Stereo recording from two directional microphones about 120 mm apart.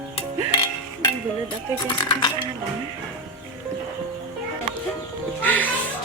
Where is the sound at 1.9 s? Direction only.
40° left (ahead or behind).